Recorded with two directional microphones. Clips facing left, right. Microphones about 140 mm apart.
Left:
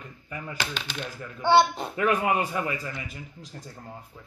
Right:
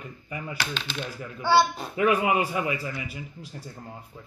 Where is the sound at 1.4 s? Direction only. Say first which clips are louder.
Left 1 dB; 20° left (ahead or behind).